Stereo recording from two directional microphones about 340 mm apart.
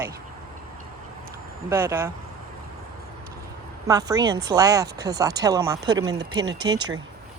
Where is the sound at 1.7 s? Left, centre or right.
Centre.